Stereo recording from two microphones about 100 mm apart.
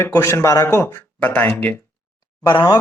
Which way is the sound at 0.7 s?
20° left (ahead or behind).